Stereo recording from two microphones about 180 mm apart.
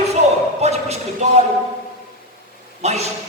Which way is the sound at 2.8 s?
35° right (ahead or behind).